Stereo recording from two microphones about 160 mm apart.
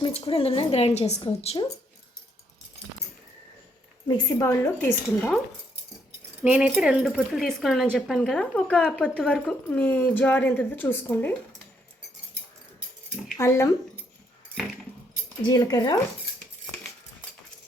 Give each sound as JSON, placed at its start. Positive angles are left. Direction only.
{"t": 0.0, "sound": "a woman's voice", "side_deg": 35}
{"t": 4.1, "sound": "speech", "side_deg": 20}
{"t": 6.4, "sound": "speech", "side_deg": -10}
{"t": 13.4, "sound": "speech", "side_deg": 15}
{"t": 14.5, "sound": "keys jangling", "side_deg": 0}
{"t": 15.4, "sound": "speech", "side_deg": 25}